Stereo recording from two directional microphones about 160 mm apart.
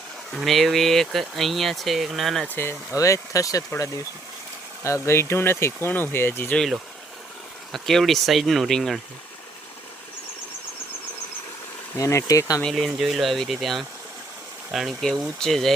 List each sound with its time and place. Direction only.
0.3 s speech: centre (ahead or behind)
2.6 s speech: 15° left (ahead or behind); by 9.0 s centre (ahead or behind)
11.9 s speech: 20° left (ahead or behind)
12.6 s speech: centre (ahead or behind)